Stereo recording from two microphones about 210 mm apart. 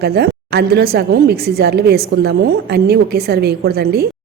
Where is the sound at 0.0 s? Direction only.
50° right (ahead or behind).